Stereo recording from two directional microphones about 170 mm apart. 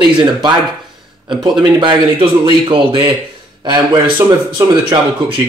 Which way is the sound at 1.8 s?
30° right (ahead or behind).